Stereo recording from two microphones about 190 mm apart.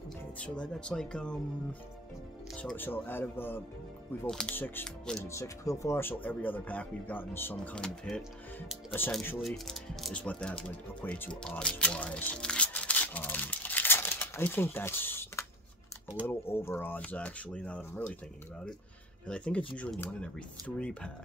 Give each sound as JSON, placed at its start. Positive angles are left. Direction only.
{"t": 0.4, "sound": "speech", "side_deg": 5}
{"t": 5.3, "sound": "speech", "side_deg": 15}
{"t": 19.2, "sound": "speech", "side_deg": 5}